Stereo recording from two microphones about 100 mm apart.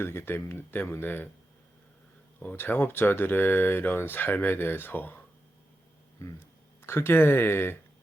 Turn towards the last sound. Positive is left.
turn(degrees=20)  # may be behind; listen again after turning